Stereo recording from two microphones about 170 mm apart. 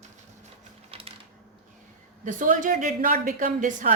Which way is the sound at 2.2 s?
50° right (ahead or behind).